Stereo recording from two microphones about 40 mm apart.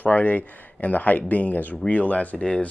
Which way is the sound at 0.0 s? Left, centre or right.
Left.